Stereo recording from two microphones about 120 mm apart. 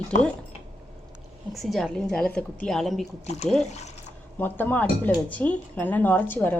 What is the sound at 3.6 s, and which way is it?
Speech, 70° left (ahead or behind).